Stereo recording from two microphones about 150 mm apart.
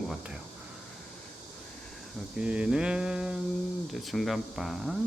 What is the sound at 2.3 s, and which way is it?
Speech, 5° right (ahead or behind).